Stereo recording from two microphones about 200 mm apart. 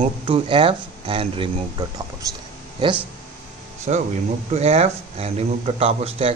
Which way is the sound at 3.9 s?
35° right (ahead or behind).